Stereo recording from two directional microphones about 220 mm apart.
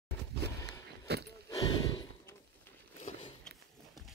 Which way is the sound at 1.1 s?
50° right (ahead or behind).